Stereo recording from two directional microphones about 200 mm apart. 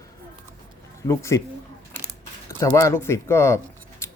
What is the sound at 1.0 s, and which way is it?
Speech, 15° left (ahead or behind).